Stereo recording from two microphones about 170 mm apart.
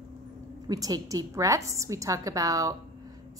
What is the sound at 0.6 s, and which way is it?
A woman's voice, 20° right (ahead or behind).